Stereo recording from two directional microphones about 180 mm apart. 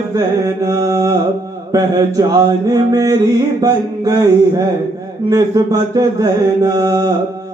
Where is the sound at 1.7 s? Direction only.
20° right (ahead or behind).